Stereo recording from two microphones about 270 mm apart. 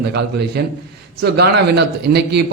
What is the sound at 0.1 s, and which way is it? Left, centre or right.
A man's voice, right.